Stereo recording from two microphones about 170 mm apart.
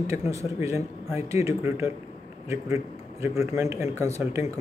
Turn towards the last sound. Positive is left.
turn(degrees=-15)  # may be behind; listen again after turning